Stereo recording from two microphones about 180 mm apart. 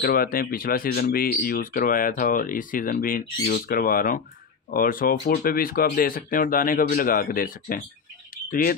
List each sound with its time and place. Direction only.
0.0 s speech: 55° left (ahead or behind)